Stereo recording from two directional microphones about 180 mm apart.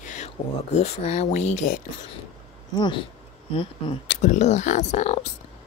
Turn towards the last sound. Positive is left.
turn(degrees=40)  # may be behind; listen again after turning